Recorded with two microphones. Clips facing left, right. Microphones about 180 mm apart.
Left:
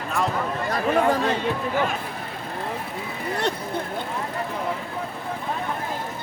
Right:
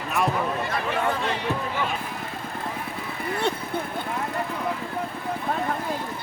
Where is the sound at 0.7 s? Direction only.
40° left (ahead or behind).